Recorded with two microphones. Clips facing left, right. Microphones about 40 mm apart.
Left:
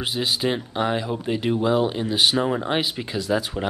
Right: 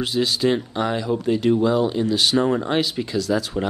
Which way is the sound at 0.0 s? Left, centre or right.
Centre.